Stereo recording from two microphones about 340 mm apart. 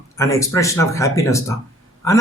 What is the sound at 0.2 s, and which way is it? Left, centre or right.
A man's voice, centre.